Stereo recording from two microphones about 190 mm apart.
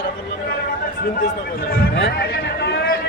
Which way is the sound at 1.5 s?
55° left (ahead or behind).